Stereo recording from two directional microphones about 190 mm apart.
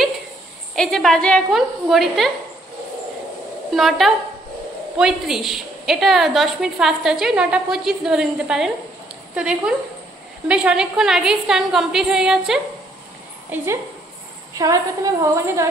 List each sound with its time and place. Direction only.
0.7 s a woman's voice: centre (ahead or behind)
3.7 s a woman's voice: centre (ahead or behind); by 15.6 s 15° right (ahead or behind)